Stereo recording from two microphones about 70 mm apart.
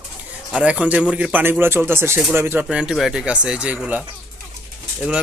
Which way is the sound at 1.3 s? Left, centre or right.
Right.